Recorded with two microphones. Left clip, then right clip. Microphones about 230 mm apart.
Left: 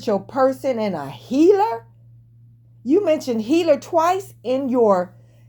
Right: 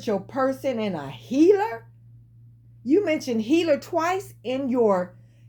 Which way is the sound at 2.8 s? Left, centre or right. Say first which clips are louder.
Left 4 dB; left.